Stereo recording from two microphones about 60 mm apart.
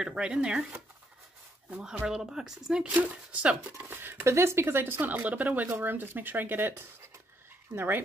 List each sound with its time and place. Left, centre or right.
0.0 s speech: centre
1.8 s speech: centre
2.9 s speech: right
3.9 s speech: right
4.2 s speech: right
5.7 s speech: right